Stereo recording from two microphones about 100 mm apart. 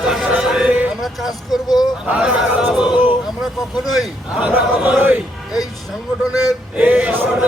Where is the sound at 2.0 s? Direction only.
15° right (ahead or behind).